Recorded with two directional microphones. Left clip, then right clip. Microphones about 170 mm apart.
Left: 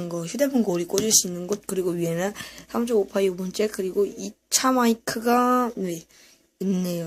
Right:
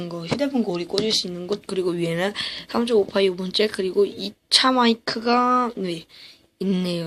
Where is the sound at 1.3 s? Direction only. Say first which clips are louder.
Right 1 dB; 25° left (ahead or behind).